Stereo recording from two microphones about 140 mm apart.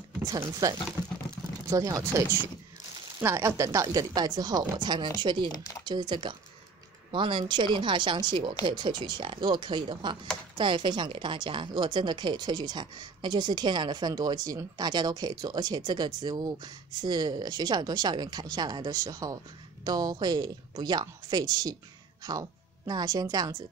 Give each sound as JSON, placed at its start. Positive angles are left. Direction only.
{"t": 0.6, "sound": "a woman's voice", "side_deg": -25}
{"t": 5.5, "sound": "speech", "side_deg": 25}
{"t": 5.9, "sound": "a woman's voice", "side_deg": -35}